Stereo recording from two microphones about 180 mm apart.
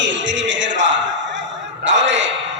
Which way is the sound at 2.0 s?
90° right.